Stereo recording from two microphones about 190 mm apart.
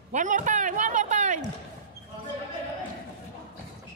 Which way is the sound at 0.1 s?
40° right (ahead or behind).